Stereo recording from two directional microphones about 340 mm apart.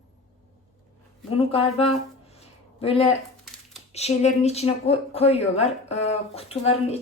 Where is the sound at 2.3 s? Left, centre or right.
Centre.